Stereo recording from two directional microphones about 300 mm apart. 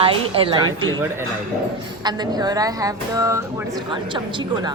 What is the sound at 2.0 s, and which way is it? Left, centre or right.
Speech, centre.